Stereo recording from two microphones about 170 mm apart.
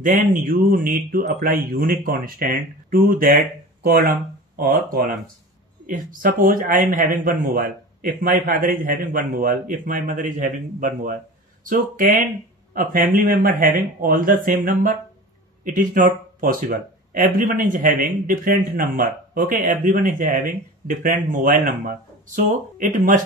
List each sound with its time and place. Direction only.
0.0 s speech: 50° right (ahead or behind)